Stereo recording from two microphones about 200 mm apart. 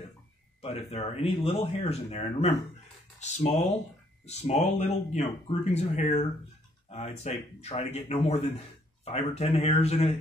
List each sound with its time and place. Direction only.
0.6 s speech: 30° left (ahead or behind)